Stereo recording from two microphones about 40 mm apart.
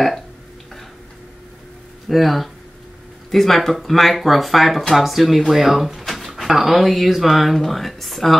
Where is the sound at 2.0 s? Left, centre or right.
Centre.